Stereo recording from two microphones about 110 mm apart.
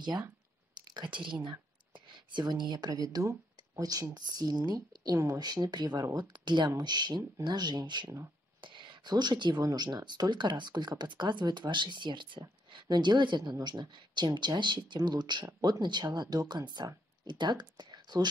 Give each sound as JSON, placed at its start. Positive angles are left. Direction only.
{"t": 0.9, "sound": "speech", "side_deg": -45}